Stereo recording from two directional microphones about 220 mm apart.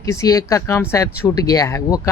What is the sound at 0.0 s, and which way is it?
Speech, 15° left (ahead or behind).